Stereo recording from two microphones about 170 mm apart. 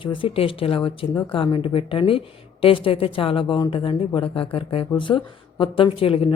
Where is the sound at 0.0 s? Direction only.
30° left (ahead or behind).